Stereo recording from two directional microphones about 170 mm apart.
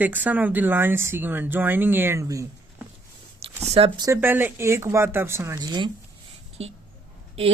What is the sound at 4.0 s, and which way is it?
Speech, 15° right (ahead or behind).